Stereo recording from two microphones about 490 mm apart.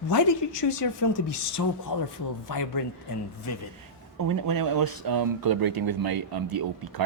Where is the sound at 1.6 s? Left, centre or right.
Left.